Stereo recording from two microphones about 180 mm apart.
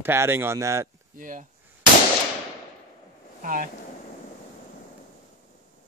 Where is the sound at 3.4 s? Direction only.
50° right (ahead or behind).